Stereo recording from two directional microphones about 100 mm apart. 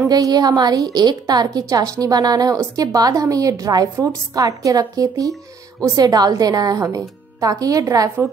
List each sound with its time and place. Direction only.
0.0 s a woman's voice: 40° right (ahead or behind)